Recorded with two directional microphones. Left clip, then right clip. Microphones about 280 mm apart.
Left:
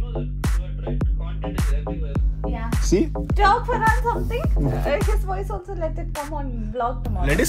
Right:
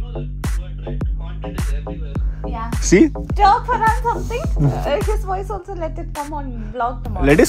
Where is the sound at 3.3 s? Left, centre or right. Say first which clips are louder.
Right 2 dB; centre.